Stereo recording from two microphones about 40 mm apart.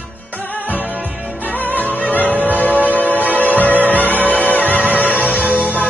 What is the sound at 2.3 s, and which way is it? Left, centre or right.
Music, right.